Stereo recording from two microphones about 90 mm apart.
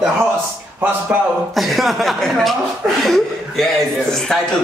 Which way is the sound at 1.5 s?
Centre (ahead or behind).